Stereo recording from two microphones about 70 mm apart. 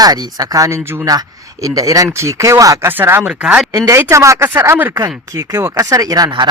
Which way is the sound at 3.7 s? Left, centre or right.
Right.